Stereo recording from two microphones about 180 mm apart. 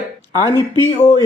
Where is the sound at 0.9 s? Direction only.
30° left (ahead or behind).